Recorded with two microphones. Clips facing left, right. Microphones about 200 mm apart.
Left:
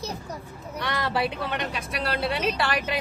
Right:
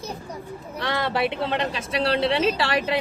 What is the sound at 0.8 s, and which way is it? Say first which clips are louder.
A woman's voice: right 3 dB; 25° right (ahead or behind).